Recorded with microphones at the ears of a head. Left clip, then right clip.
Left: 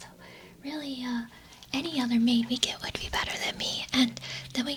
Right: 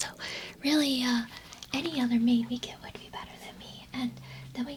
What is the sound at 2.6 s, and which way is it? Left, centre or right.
Speech, left.